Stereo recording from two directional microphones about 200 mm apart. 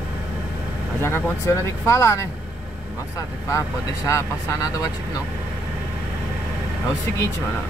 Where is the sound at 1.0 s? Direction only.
15° left (ahead or behind).